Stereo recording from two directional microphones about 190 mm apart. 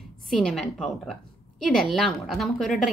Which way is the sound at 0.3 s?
Centre (ahead or behind).